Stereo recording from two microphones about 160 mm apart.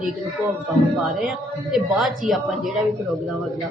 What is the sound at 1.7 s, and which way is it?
A woman's voice, centre (ahead or behind).